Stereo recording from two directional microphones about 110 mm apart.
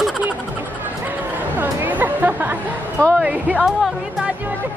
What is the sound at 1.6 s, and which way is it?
A woman's voice, 15° right (ahead or behind).